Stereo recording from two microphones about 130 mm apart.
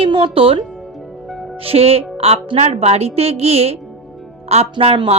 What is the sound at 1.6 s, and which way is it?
A woman's voice, 50° right (ahead or behind).